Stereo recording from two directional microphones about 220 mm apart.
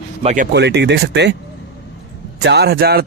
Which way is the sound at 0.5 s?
50° right (ahead or behind).